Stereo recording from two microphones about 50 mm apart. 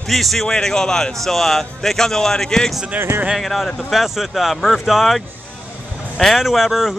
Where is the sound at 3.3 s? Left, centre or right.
Centre.